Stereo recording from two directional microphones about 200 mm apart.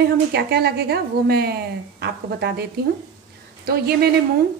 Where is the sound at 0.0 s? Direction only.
55° right (ahead or behind).